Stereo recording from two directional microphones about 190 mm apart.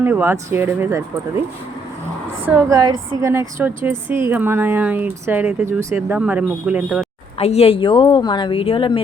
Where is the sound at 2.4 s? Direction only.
15° right (ahead or behind).